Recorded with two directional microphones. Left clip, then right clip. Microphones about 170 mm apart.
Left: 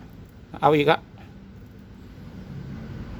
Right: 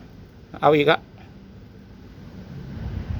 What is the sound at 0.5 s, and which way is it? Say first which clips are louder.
Speech: right 2 dB; 15° left (ahead or behind).